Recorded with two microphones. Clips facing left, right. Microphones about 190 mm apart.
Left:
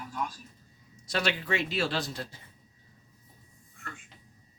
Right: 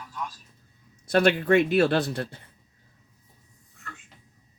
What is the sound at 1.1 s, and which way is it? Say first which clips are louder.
Speech: right 10 dB; 55° right (ahead or behind).